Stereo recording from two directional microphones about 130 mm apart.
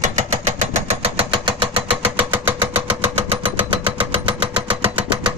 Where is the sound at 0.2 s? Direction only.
55° right (ahead or behind).